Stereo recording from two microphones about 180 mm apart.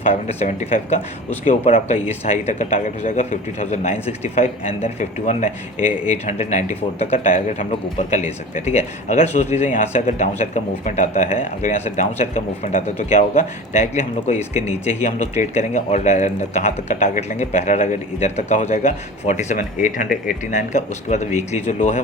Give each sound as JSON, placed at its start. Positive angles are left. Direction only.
{"t": 0.1, "sound": "speech", "side_deg": 35}